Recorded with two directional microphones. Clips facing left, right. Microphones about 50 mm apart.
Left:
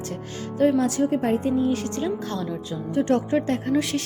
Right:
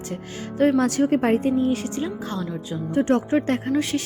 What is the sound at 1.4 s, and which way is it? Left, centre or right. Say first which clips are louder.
Speech: right 1 dB; right.